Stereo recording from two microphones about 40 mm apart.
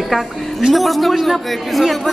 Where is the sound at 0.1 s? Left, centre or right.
Centre.